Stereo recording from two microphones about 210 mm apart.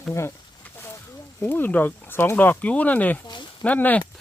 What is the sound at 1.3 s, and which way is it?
Speech, 10° left (ahead or behind).